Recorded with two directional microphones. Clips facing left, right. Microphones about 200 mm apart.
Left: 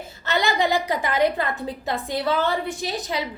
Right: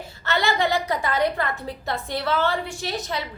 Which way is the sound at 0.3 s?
15° left (ahead or behind).